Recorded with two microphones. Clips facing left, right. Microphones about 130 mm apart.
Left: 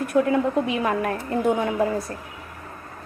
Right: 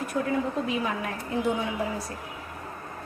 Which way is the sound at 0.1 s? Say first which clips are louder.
Left 9 dB; 75° left (ahead or behind).